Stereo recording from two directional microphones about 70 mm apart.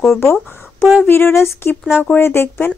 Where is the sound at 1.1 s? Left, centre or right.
Left.